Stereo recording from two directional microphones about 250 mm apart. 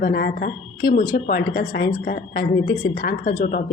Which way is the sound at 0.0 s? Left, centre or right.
Left.